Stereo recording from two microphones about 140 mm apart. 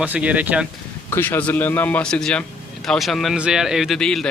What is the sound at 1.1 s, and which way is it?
A man's voice, 15° left (ahead or behind).